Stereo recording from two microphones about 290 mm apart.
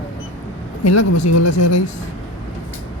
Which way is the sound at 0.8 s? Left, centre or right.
Left.